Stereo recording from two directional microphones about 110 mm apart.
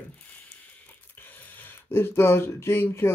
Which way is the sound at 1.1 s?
15° left (ahead or behind).